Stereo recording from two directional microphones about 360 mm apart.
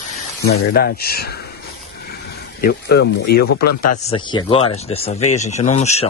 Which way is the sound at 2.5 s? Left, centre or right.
Left.